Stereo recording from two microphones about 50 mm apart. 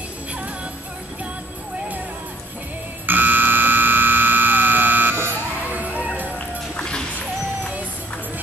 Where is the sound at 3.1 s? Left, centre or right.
Right.